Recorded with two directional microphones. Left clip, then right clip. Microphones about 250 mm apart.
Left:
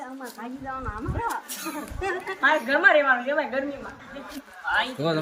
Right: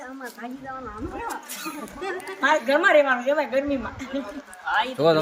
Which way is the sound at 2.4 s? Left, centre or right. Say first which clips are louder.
Even; right.